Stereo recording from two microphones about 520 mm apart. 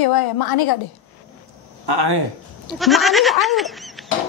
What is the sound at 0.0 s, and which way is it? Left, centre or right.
Speech, left.